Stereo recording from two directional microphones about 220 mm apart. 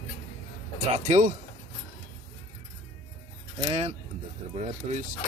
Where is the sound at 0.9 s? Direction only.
35° right (ahead or behind).